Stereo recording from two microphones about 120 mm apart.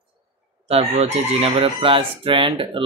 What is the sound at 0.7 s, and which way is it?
Speech, 60° right (ahead or behind).